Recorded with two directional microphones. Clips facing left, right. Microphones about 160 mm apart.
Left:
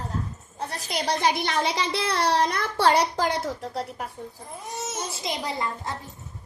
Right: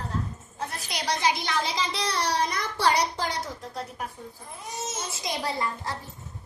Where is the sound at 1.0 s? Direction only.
60° left (ahead or behind).